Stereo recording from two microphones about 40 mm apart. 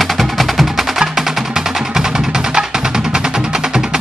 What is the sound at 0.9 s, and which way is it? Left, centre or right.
Music, centre.